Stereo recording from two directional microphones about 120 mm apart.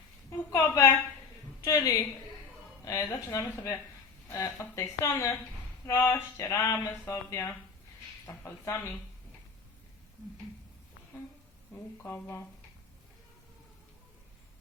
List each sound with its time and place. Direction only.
0.3 s a sound: 25° left (ahead or behind)
1.6 s speech: 30° left (ahead or behind)
11.7 s speech: 20° left (ahead or behind)